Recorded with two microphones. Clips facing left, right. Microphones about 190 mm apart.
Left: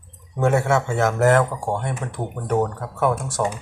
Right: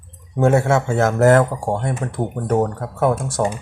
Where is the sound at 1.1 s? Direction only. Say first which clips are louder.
Right 4 dB; 45° right (ahead or behind).